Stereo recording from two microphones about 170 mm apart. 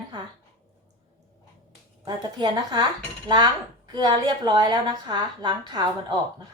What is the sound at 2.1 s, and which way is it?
A woman's voice, 25° right (ahead or behind).